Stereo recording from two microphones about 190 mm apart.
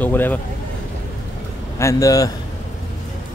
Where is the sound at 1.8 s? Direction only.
15° left (ahead or behind).